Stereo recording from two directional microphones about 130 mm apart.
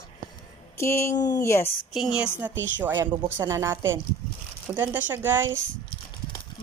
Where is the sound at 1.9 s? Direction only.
5° right (ahead or behind).